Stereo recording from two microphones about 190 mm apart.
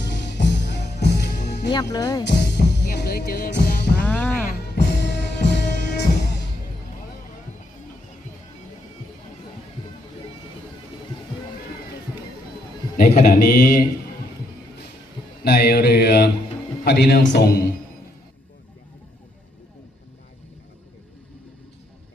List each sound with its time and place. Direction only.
0.0 s music: 65° left (ahead or behind)
1.7 s speech: 20° left (ahead or behind)
2.2 s music: 65° left (ahead or behind)
4.0 s music: 5° left (ahead or behind)
4.4 s music: 60° left (ahead or behind)
13.0 s speech: 50° left (ahead or behind)
15.4 s mantra: 60° left (ahead or behind)